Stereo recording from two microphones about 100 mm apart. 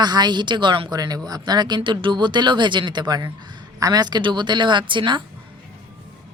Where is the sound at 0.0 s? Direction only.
45° right (ahead or behind).